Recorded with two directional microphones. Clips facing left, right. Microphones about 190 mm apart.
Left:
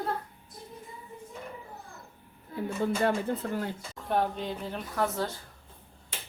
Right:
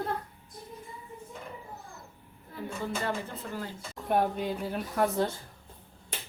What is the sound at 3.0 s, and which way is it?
Speech, 55° left (ahead or behind).